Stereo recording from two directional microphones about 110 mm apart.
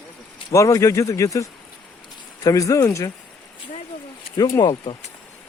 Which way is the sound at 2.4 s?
30° left (ahead or behind).